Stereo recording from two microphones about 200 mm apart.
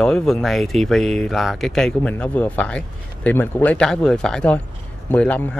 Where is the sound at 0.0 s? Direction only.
5° left (ahead or behind).